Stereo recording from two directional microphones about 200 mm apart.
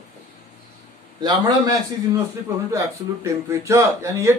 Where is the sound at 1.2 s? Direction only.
20° right (ahead or behind).